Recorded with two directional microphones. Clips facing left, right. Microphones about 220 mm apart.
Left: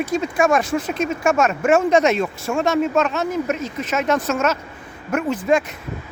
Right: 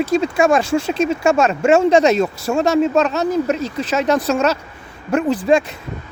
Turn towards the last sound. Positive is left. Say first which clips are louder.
# right 3 dB
turn(degrees=-30)  # may be behind; listen again after turning